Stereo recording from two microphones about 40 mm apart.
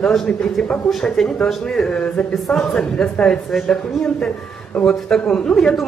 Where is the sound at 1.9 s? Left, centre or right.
Left.